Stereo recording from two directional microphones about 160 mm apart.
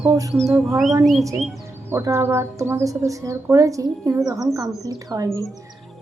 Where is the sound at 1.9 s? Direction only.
15° right (ahead or behind).